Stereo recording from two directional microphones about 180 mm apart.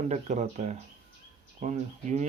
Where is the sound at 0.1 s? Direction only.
40° right (ahead or behind).